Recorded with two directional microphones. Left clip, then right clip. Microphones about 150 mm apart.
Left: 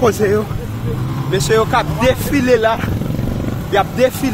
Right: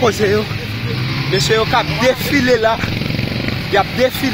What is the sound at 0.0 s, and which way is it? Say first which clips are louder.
Speech: even; 10° left (ahead or behind).